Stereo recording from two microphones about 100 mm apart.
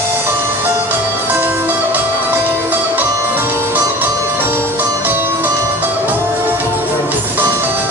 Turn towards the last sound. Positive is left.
turn(degrees=-20)  # may be behind; listen again after turning